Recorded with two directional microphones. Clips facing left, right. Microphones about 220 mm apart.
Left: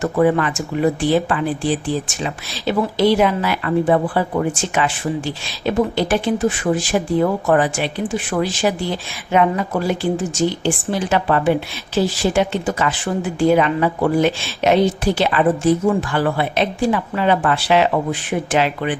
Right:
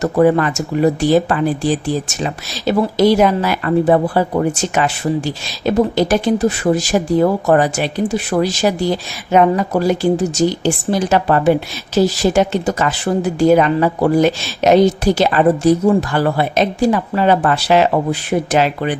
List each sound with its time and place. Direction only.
0.0 s speech: 40° right (ahead or behind)